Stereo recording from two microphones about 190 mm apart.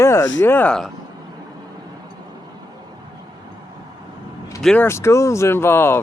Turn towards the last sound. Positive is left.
turn(degrees=10)  # may be behind; listen again after turning